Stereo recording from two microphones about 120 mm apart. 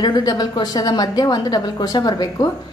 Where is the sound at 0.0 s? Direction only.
35° left (ahead or behind).